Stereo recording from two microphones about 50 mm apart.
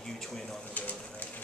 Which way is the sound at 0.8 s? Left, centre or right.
Left.